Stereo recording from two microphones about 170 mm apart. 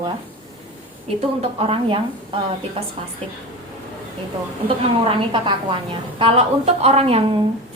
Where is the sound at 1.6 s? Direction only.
35° right (ahead or behind).